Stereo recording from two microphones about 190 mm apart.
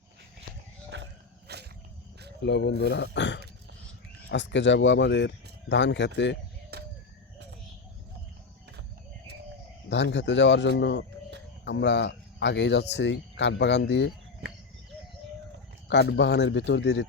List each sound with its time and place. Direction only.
0.9 s dog: 70° right (ahead or behind)
1.5 s a sound: 60° right (ahead or behind)
2.4 s speech: 65° left (ahead or behind)
6.7 s a sound: 60° right (ahead or behind)
9.9 s speech: 70° left (ahead or behind)
15.9 s speech: 65° left (ahead or behind)